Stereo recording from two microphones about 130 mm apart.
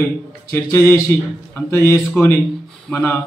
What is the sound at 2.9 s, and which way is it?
Speech, 10° left (ahead or behind).